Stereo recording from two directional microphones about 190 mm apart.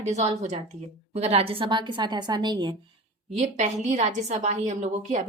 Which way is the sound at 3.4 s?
35° right (ahead or behind).